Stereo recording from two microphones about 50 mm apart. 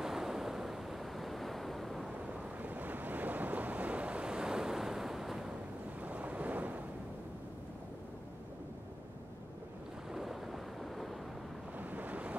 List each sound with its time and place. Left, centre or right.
0.0 s waves: centre
2.1 s waves: right; by 5.5 s centre
5.9 s waves: right
10.1 s boat: centre
11.8 s waves: right